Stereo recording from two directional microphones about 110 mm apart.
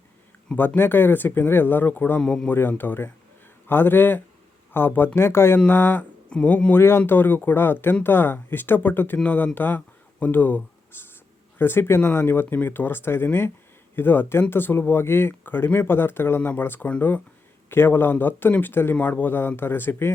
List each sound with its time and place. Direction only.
0.4 s speech: 15° left (ahead or behind)
2.5 s speech: 20° left (ahead or behind)